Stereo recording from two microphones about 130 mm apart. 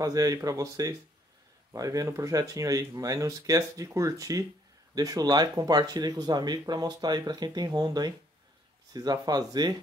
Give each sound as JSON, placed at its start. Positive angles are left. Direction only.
{"t": 0.0, "sound": "speech", "side_deg": -25}